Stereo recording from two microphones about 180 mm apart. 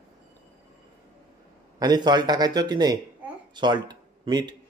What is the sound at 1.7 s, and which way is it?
Speech, 20° right (ahead or behind).